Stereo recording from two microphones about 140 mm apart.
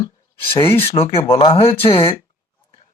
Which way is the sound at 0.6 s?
45° left (ahead or behind).